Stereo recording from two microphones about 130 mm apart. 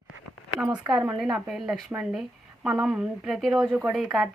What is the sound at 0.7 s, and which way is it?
Speech, 30° right (ahead or behind).